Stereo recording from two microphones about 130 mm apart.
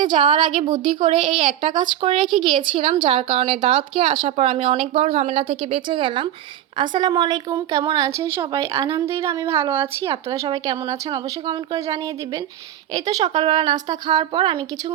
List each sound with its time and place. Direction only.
0.0 s a woman's voice: 40° right (ahead or behind)